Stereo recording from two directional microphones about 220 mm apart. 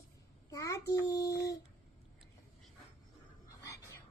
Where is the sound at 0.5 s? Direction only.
15° left (ahead or behind).